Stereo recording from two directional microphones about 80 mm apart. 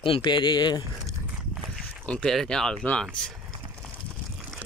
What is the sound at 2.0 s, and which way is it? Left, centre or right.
Speech, centre.